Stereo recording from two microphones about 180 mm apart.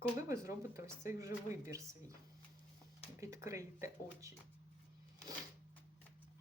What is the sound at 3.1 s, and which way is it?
Speech, 15° right (ahead or behind).